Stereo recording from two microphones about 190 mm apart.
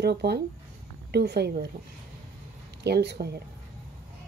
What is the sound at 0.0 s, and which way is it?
A woman's voice, 60° right (ahead or behind).